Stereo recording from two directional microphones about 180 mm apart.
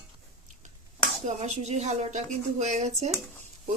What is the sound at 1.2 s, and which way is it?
Speech, 40° right (ahead or behind).